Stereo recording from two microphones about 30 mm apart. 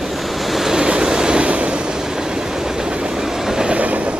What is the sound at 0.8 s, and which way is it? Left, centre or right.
Vehicle, right.